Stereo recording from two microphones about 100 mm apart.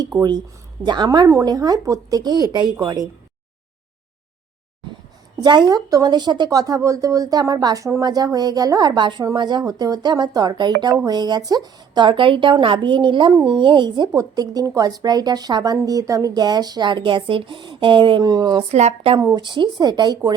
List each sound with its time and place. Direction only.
0.2 s speech: 45° right (ahead or behind)
5.4 s speech: 45° right (ahead or behind)
9.0 s speech: 50° right (ahead or behind)
14.1 s speech: 35° right (ahead or behind); by 18.2 s 55° right (ahead or behind)
18.2 s speech: 40° right (ahead or behind)
18.7 s speech: 90° right
19.2 s speech: 45° right (ahead or behind)